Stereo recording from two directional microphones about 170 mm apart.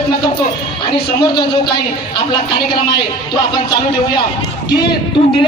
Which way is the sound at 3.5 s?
25° left (ahead or behind).